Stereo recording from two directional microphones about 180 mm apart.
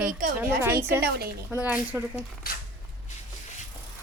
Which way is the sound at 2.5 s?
55° left (ahead or behind).